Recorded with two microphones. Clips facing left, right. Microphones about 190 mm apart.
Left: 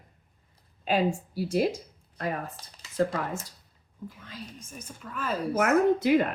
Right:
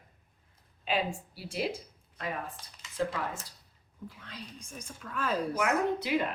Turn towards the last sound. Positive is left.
turn(degrees=50)  # may be behind; listen again after turning